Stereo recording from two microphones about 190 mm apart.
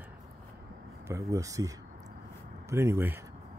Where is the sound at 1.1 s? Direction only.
15° right (ahead or behind).